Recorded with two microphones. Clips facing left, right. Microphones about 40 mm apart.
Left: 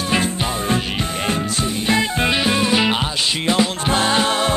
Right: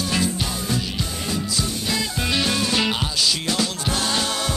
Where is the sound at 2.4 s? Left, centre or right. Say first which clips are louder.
Left 2 dB; left.